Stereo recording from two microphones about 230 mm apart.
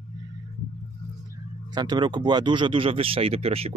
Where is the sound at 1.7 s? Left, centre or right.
Centre.